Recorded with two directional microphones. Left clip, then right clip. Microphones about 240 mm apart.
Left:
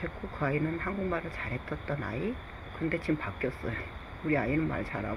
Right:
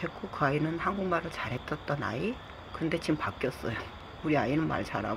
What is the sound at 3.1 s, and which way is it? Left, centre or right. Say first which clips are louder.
A man's voice: right 1 dB; centre.